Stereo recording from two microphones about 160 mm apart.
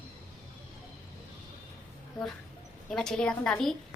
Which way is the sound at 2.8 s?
5° left (ahead or behind).